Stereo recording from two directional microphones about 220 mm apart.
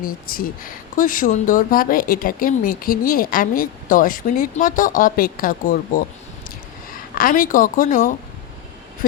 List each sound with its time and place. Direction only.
0.0 s speech: 40° left (ahead or behind)
7.2 s speech: 40° left (ahead or behind)